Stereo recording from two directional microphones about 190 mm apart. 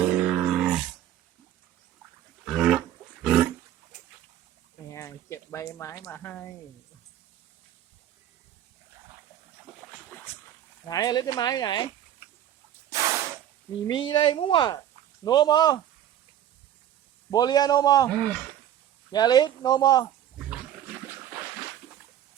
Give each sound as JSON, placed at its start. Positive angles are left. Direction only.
{"t": 0.0, "sound": "grunt", "side_deg": -5}
{"t": 2.4, "sound": "a sound", "side_deg": 0}
{"t": 4.9, "sound": "a sound", "side_deg": 15}
{"t": 5.7, "sound": "speech", "side_deg": 15}
{"t": 10.8, "sound": "speech", "side_deg": 20}
{"t": 12.9, "sound": "a sound", "side_deg": -15}
{"t": 13.8, "sound": "speech", "side_deg": 25}
{"t": 17.3, "sound": "speech", "side_deg": 20}
{"t": 18.1, "sound": "speech", "side_deg": 5}
{"t": 19.1, "sound": "speech", "side_deg": 20}